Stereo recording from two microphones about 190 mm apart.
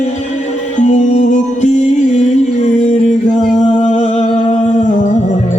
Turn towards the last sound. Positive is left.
turn(degrees=35)  # may be behind; listen again after turning